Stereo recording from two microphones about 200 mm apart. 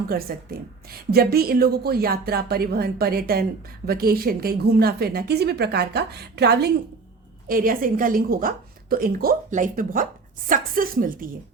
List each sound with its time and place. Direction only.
1.1 s speech: 50° right (ahead or behind)
7.4 s speech: 45° right (ahead or behind)